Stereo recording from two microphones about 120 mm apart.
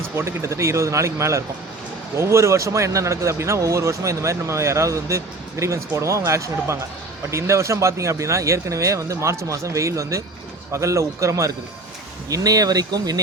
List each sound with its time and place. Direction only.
0.2 s speech: 25° right (ahead or behind)